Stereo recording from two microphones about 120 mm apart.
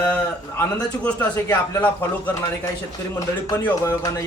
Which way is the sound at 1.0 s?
15° left (ahead or behind).